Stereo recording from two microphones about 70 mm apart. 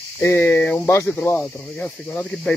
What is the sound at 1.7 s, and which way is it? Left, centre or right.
Speech, centre.